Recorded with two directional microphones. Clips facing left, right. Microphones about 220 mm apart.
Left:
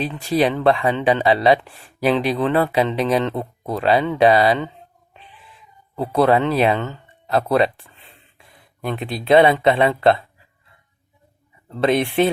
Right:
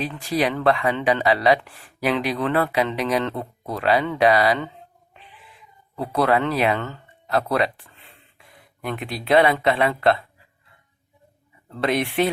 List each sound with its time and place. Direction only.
0.0 s speech: 25° left (ahead or behind)
6.0 s speech: 25° left (ahead or behind)
11.8 s speech: 25° left (ahead or behind)